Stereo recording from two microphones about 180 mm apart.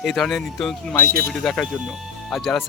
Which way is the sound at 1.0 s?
55° right (ahead or behind).